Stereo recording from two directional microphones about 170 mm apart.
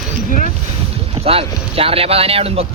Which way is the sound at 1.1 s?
35° right (ahead or behind).